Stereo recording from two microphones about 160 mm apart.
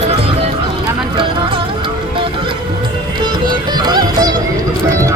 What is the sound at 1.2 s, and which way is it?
Music, 35° right (ahead or behind).